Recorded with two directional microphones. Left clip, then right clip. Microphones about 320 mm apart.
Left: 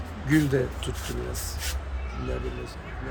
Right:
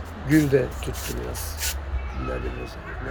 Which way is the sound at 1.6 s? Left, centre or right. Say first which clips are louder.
Right 5 dB; right.